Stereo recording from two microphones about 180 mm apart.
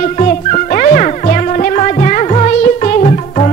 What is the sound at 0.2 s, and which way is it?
Music, 45° left (ahead or behind).